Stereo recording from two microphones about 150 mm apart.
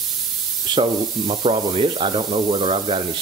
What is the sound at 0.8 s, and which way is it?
Sanding, 40° right (ahead or behind).